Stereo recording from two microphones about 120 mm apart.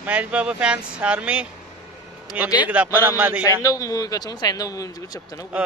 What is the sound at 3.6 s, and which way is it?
Speech, 25° left (ahead or behind).